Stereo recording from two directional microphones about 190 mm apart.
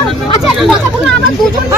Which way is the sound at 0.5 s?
Centre (ahead or behind).